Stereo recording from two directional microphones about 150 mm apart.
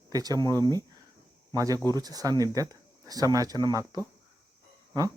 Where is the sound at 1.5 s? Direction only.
25° right (ahead or behind).